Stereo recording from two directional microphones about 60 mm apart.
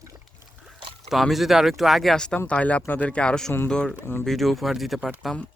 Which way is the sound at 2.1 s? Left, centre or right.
Centre.